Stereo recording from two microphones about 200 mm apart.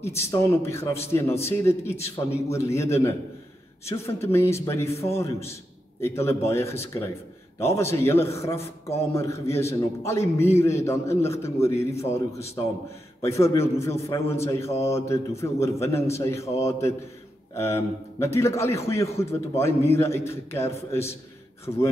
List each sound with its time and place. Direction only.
0.0 s a man's voice: 15° left (ahead or behind)